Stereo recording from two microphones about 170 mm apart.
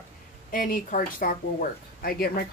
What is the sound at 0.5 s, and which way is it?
Speech, 55° left (ahead or behind).